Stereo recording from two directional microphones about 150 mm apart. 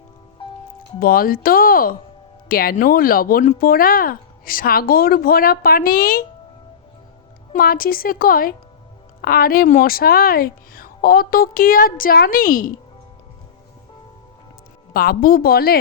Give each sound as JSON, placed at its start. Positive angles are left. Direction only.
{"t": 0.4, "sound": "music", "side_deg": 35}
{"t": 0.9, "sound": "speech", "side_deg": 75}
{"t": 7.5, "sound": "speech", "side_deg": 75}
{"t": 9.2, "sound": "speech", "side_deg": 80}
{"t": 14.9, "sound": "speech", "side_deg": 80}